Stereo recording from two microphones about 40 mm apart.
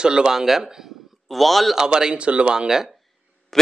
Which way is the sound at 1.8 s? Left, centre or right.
Centre.